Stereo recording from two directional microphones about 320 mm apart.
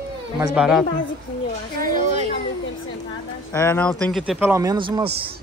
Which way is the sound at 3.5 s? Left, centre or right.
Centre.